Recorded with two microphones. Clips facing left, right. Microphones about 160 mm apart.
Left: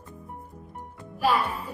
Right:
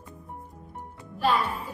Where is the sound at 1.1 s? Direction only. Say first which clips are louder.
Left 1 dB; 10° left (ahead or behind).